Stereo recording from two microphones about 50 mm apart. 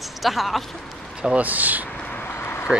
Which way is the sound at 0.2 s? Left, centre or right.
Centre.